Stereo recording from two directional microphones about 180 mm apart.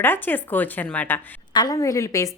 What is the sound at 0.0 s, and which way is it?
A woman's voice, 10° left (ahead or behind).